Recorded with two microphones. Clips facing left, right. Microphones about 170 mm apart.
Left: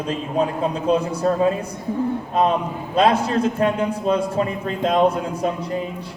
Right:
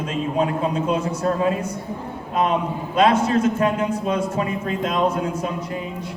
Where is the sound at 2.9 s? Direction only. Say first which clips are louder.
Even; 30° left (ahead or behind).